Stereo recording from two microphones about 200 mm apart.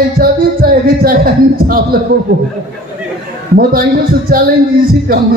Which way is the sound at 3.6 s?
45° right (ahead or behind).